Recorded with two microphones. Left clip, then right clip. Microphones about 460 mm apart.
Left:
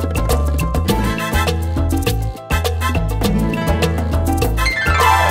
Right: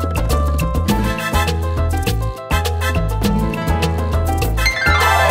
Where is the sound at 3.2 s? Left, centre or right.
Left.